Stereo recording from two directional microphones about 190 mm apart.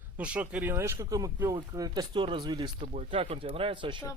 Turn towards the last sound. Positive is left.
turn(degrees=-25)  # may be behind; listen again after turning